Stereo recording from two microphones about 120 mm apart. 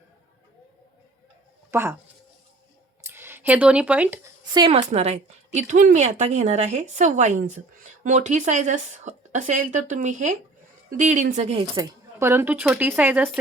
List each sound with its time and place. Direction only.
1.7 s speech: 20° right (ahead or behind)
3.0 s speech: 20° right (ahead or behind)
4.9 s speech: 65° right (ahead or behind)
11.8 s speech: 20° right (ahead or behind)